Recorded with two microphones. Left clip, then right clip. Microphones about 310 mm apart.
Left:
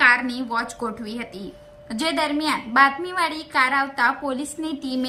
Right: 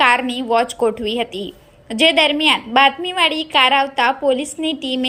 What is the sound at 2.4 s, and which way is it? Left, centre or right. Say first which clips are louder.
A woman's voice: right 1 dB; centre.